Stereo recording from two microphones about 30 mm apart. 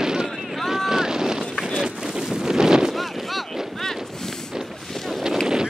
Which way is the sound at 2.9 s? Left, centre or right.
Centre.